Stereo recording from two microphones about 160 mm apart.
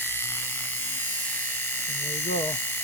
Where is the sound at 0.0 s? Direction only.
15° left (ahead or behind).